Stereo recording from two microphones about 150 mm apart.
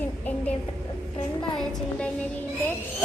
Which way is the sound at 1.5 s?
5° left (ahead or behind).